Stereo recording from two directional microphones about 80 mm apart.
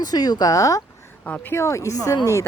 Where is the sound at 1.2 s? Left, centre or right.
Centre.